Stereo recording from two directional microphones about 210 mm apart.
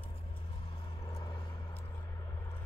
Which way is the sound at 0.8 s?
20° left (ahead or behind).